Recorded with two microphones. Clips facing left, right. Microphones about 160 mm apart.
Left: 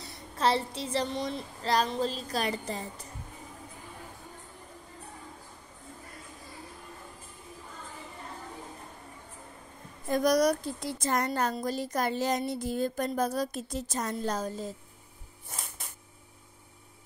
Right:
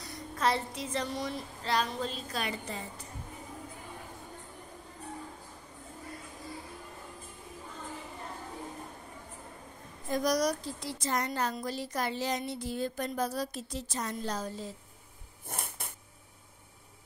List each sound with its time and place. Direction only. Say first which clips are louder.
0.0 s a woman's voice: left 2 dB; 30° left (ahead or behind)
10.1 s speech: left 4 dB; 55° left (ahead or behind)
15.4 s a sound: right 3 dB; 55° right (ahead or behind)